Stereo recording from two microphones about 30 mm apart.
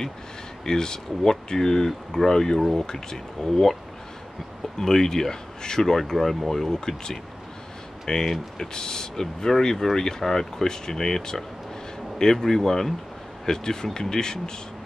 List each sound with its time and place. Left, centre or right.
0.7 s speech: left
4.7 s speech: centre
6.1 s speech: centre; by 14.5 s left